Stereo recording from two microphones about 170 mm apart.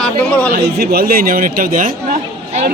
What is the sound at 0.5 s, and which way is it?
Speech, 70° right (ahead or behind).